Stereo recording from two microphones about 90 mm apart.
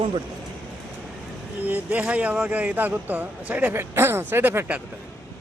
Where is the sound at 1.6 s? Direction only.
20° right (ahead or behind).